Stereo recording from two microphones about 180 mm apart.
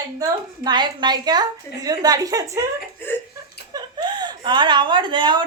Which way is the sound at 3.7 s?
25° right (ahead or behind).